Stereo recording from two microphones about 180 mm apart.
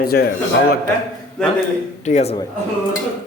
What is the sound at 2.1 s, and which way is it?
Speech, 45° left (ahead or behind).